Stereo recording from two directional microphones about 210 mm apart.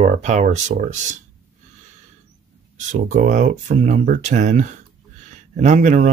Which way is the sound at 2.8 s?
35° right (ahead or behind).